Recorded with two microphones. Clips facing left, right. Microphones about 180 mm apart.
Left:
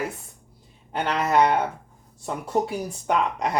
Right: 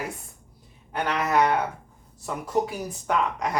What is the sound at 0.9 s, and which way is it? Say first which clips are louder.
Speech: left 2 dB; 25° left (ahead or behind).